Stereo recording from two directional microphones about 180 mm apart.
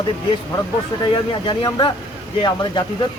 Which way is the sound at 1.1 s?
25° left (ahead or behind).